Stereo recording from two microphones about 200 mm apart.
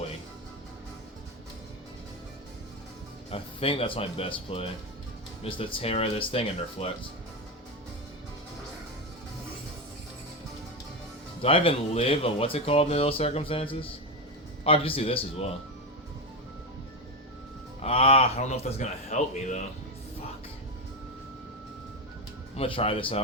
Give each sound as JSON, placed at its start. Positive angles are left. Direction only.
{"t": 3.2, "sound": "speech", "side_deg": 30}
{"t": 11.4, "sound": "speech", "side_deg": 30}
{"t": 17.8, "sound": "a man's voice", "side_deg": 30}
{"t": 22.5, "sound": "speech", "side_deg": 30}